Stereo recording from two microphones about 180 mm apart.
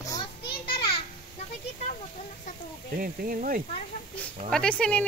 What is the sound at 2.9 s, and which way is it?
Speech, 50° right (ahead or behind).